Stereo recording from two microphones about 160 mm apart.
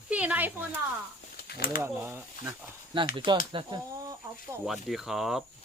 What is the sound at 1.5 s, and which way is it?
Speech, 70° left (ahead or behind).